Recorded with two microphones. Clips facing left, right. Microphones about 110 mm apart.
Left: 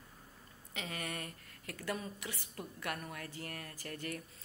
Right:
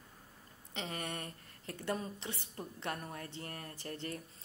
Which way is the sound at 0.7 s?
25° right (ahead or behind).